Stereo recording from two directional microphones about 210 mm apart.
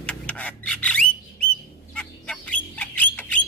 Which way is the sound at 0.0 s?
5° left (ahead or behind).